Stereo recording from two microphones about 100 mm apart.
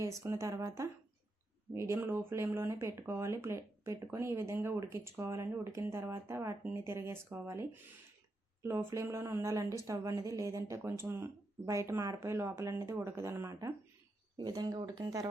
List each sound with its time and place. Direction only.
0.2 s speech: 30° right (ahead or behind)
14.3 s speech: 40° right (ahead or behind)